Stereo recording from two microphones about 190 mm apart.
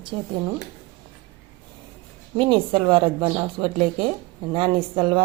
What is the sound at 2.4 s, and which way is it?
Speech, 25° right (ahead or behind).